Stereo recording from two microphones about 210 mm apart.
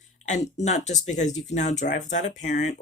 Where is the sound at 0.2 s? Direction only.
35° left (ahead or behind).